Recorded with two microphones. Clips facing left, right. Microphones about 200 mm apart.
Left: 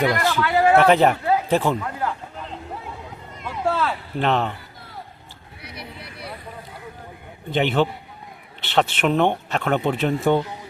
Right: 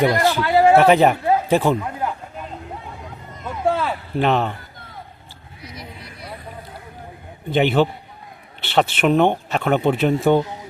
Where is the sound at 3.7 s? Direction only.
10° right (ahead or behind).